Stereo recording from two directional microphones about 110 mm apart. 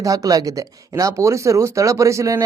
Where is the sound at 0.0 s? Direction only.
35° right (ahead or behind).